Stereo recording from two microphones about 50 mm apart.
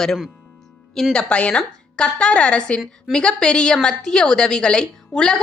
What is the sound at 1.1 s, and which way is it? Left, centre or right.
A woman's voice, left.